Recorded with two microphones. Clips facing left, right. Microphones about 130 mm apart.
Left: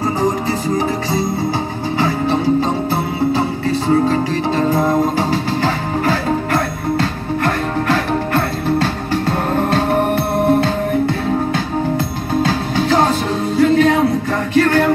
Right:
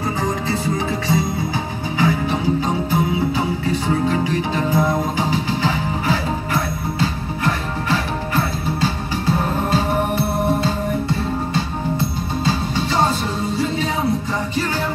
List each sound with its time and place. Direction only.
2.0 s music: 35° left (ahead or behind)
3.9 s music: 45° left (ahead or behind)
5.6 s music: 60° left (ahead or behind)
13.6 s music: 65° left (ahead or behind)